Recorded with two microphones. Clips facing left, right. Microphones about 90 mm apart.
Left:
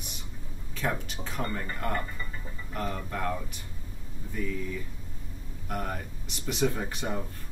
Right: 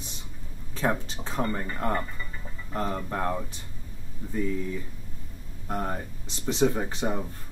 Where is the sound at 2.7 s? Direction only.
30° right (ahead or behind).